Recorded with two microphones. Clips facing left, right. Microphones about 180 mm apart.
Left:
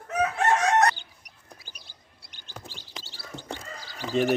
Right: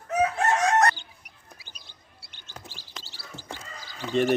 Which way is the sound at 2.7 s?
20° left (ahead or behind).